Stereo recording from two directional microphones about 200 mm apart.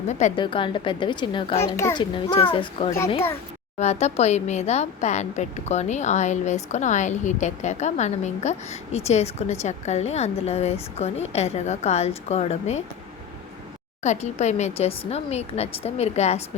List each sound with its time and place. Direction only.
0.1 s a woman's voice: 35° left (ahead or behind)
1.7 s a woman's voice: 15° left (ahead or behind); by 12.8 s 35° left (ahead or behind)
14.0 s speech: 35° left (ahead or behind)